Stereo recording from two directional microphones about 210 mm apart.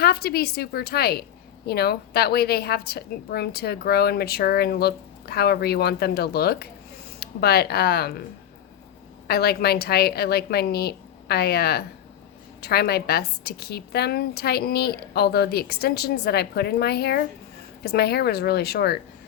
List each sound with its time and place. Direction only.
0.0 s a woman's voice: 50° left (ahead or behind)
9.2 s a woman's voice: 50° left (ahead or behind)